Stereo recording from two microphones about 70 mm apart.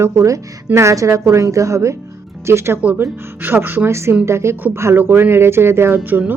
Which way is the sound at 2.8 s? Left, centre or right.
Right.